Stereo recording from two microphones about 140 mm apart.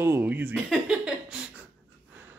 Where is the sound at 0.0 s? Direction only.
15° right (ahead or behind).